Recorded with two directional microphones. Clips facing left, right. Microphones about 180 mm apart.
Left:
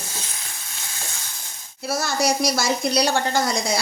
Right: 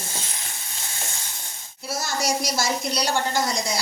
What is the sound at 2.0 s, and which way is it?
Speech, 65° left (ahead or behind).